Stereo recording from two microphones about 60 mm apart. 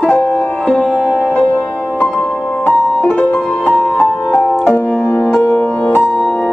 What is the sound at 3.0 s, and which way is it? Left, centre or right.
Music, left.